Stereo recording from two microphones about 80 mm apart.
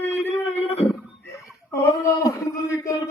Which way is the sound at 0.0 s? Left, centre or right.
Left.